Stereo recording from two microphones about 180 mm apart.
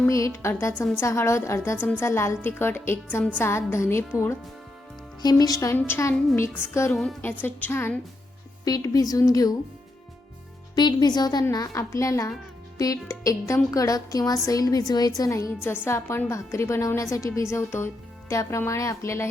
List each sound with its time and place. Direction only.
0.0 s a woman's voice: 15° left (ahead or behind)
5.2 s a woman's voice: 20° left (ahead or behind)
6.9 s a woman's voice: centre (ahead or behind)
7.2 s a woman's voice: 10° left (ahead or behind)
10.8 s a woman's voice: 25° left (ahead or behind)